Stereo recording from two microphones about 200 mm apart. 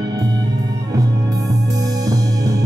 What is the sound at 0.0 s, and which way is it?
Music, 20° right (ahead or behind).